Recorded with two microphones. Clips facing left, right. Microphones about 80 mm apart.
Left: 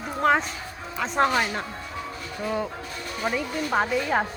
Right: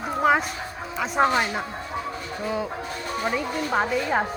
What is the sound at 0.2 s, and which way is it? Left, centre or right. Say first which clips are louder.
Bow-wow: right 1 dB; centre.